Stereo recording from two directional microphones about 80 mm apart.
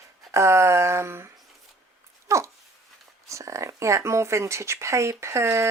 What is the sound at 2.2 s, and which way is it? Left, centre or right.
Dog, right.